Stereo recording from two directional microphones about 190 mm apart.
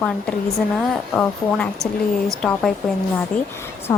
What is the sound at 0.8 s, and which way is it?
Speech, 5° left (ahead or behind).